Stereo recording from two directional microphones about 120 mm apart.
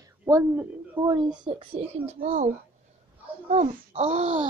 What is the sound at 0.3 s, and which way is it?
Speech, 25° right (ahead or behind).